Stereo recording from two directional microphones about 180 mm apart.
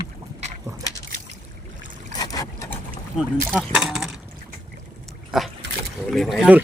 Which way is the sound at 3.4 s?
5° left (ahead or behind).